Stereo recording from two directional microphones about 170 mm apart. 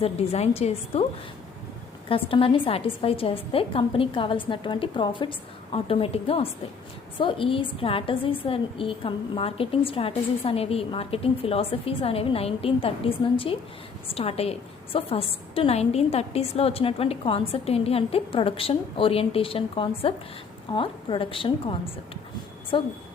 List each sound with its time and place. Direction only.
0.0 s a woman's voice: 35° left (ahead or behind)
2.0 s a woman's voice: 30° left (ahead or behind)